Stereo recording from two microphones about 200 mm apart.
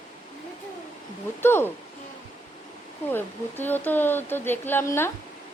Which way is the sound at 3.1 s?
10° left (ahead or behind).